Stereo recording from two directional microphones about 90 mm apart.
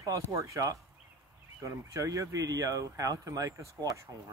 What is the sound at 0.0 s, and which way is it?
Speech, 35° right (ahead or behind).